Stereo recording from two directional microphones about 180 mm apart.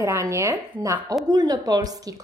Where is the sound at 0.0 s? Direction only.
15° right (ahead or behind).